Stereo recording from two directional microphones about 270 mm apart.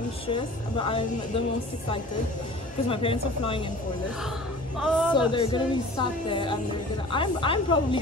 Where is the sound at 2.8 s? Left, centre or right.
Centre.